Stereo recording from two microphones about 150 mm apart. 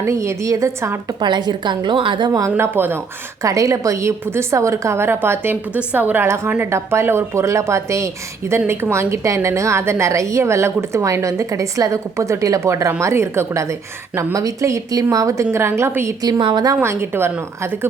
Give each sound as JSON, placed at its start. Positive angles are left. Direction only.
{"t": 0.0, "sound": "a woman's voice", "side_deg": -20}
{"t": 1.2, "sound": "a woman's voice", "side_deg": -30}
{"t": 2.5, "sound": "a woman's voice", "side_deg": -15}
{"t": 16.4, "sound": "a woman's voice", "side_deg": -30}
{"t": 16.8, "sound": "a woman's voice", "side_deg": -15}